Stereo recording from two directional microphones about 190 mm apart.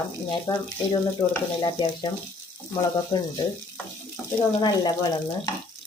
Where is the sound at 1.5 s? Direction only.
25° left (ahead or behind).